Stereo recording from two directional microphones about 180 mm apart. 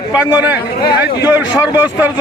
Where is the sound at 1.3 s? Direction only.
10° right (ahead or behind).